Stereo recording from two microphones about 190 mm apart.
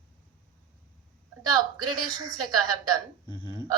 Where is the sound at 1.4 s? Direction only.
20° right (ahead or behind).